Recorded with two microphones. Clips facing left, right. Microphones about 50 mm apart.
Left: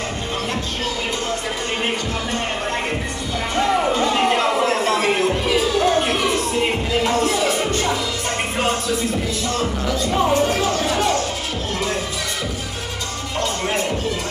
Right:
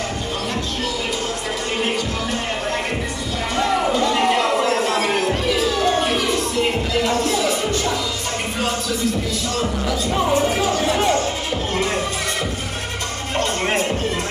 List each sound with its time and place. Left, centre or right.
3.5 s music: centre
4.0 s a sound: centre
5.3 s music: centre
7.1 s music: left
9.8 s music: centre
10.3 s music: centre
13.4 s music: right